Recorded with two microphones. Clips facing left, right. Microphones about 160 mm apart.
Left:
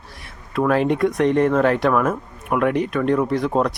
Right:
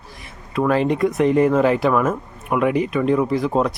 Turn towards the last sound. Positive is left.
turn(degrees=0)  # may be behind; listen again after turning